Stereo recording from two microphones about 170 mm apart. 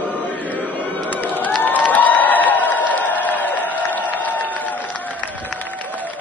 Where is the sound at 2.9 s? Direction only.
10° left (ahead or behind).